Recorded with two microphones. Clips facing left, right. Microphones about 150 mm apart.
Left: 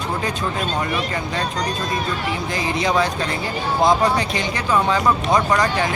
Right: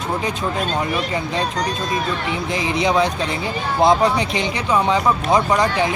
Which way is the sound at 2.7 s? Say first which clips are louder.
Right 2 dB; 20° right (ahead or behind).